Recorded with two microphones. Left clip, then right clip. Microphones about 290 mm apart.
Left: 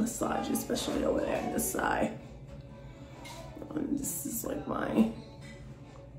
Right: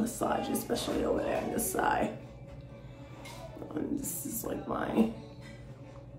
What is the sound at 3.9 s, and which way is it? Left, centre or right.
A woman's voice, centre.